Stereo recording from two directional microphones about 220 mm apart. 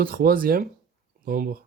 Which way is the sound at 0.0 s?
40° right (ahead or behind).